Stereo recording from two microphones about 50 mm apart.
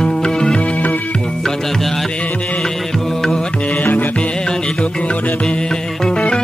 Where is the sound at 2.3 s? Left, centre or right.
Left.